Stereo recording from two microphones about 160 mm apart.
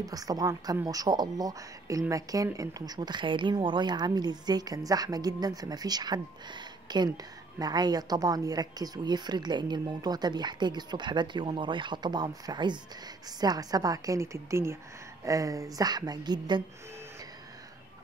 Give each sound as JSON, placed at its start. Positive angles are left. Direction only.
{"t": 0.0, "sound": "speech", "side_deg": -25}